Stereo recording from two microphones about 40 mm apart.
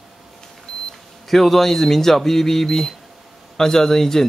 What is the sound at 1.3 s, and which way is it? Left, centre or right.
Speech, centre.